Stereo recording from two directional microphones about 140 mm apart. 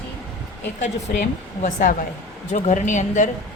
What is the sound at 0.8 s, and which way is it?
A woman's voice, 60° left (ahead or behind).